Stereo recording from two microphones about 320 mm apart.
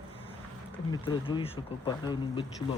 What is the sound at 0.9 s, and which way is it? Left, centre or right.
Speech, centre.